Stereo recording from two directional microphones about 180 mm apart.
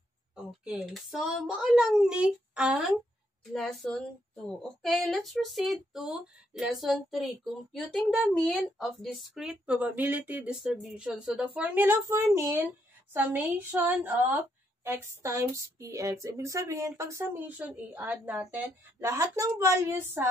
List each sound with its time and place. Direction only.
0.7 s speech: 5° right (ahead or behind)